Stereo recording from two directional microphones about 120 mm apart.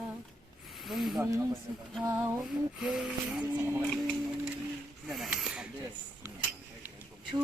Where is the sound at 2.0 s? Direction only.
25° right (ahead or behind).